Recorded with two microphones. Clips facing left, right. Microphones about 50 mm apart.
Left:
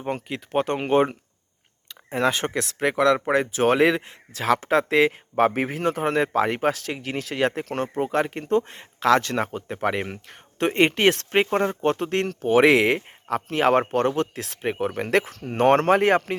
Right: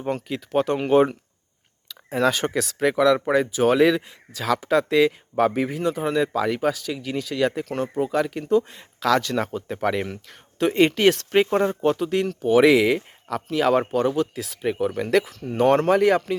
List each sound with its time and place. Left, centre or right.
0.0 s speech: left
2.1 s speech: centre
2.6 s speech: left
3.5 s speech: left
3.8 s speech: left
9.0 s speech: left
11.9 s speech: left
14.6 s speech: left